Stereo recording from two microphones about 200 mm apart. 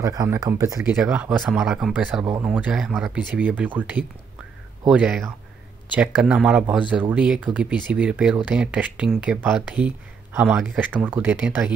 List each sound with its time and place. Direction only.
0.0 s speech: 15° right (ahead or behind)